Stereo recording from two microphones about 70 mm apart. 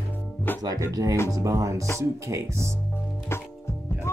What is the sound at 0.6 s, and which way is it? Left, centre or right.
Speech, right.